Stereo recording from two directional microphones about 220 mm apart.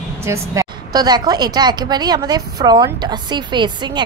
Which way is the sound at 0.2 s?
15° right (ahead or behind).